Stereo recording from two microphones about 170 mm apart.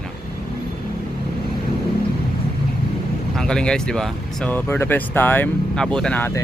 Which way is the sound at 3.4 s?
5° left (ahead or behind).